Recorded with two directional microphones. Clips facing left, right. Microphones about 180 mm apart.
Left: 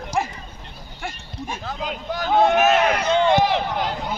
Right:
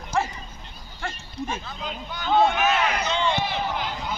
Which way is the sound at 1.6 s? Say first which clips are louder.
Left 6 dB; 90° left.